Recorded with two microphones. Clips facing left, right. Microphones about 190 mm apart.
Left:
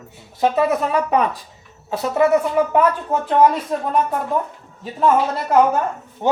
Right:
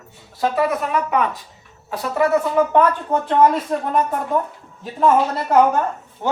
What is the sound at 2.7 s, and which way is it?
Speech, centre (ahead or behind).